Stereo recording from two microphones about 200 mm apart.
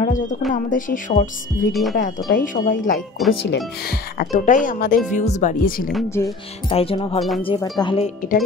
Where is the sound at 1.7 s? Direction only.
Centre (ahead or behind).